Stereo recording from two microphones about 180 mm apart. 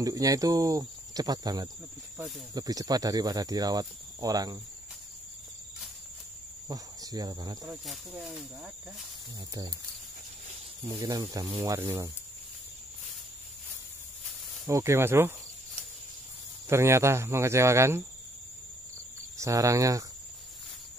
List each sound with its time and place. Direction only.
0.0 s speech: 20° right (ahead or behind)
6.7 s speech: 20° right (ahead or behind)
7.6 s speech: 5° right (ahead or behind)
9.5 s speech: 20° right (ahead or behind)
10.8 s speech: 20° right (ahead or behind)
14.7 s speech: 15° right (ahead or behind)
16.6 s speech: 15° right (ahead or behind)
19.3 s speech: 15° right (ahead or behind)